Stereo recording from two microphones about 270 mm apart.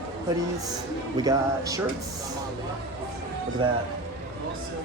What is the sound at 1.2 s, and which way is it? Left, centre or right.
Speech, centre.